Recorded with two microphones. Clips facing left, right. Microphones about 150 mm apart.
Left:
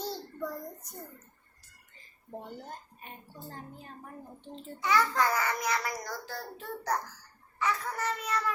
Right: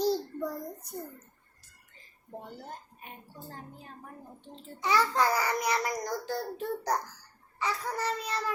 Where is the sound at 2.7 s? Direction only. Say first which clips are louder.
Even; 5° right (ahead or behind).